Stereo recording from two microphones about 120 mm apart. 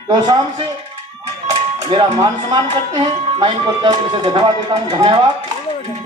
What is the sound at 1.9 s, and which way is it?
Speech, 40° right (ahead or behind).